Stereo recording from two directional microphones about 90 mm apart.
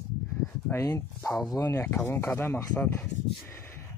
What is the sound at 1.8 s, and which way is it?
Speech, 25° left (ahead or behind).